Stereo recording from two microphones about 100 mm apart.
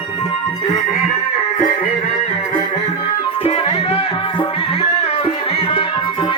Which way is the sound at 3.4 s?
80° left.